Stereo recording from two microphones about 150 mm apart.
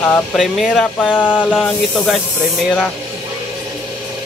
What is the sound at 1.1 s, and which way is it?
Snake, 10° left (ahead or behind).